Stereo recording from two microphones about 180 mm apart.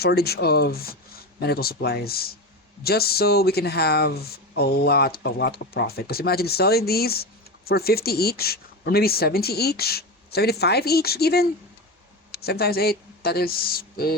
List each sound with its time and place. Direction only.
0.0 s speech: 60° left (ahead or behind)